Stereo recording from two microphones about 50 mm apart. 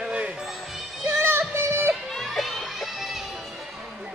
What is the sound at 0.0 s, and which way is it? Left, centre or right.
Basketball bounce, centre.